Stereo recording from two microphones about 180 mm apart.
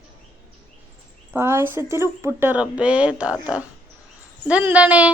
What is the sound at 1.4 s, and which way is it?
Speech, 15° right (ahead or behind).